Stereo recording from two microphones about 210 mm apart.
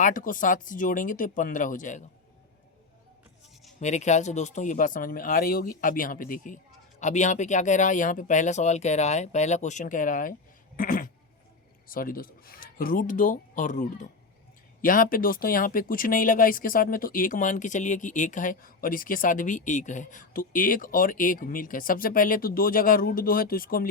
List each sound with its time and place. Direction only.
0.0 s speech: 40° left (ahead or behind)
3.8 s speech: 35° left (ahead or behind)